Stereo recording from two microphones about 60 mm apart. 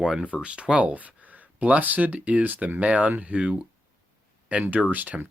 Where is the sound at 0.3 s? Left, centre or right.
Centre.